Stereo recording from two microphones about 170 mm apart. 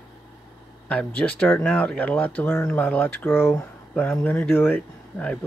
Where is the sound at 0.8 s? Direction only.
5° left (ahead or behind).